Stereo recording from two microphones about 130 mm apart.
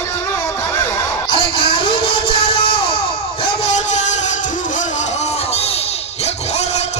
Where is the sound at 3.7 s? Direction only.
65° left (ahead or behind).